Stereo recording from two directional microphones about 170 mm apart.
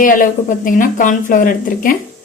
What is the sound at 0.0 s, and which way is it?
A woman's voice, 50° left (ahead or behind).